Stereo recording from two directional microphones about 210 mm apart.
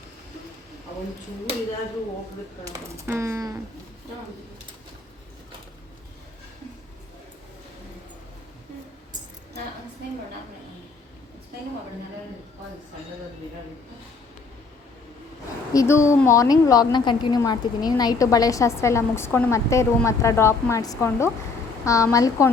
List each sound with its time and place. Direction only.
2.7 s speech: 15° right (ahead or behind)
15.7 s a woman's voice: 15° left (ahead or behind)